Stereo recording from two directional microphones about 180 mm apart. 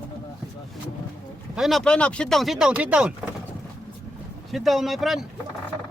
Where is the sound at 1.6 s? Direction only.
Centre (ahead or behind).